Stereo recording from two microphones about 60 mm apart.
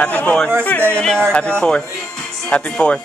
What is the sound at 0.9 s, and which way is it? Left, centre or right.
A man's voice, centre.